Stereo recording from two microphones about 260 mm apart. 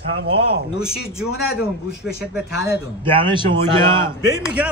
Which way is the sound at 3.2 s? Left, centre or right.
Centre.